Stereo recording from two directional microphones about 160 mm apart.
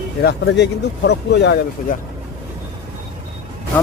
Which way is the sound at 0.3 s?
90° left.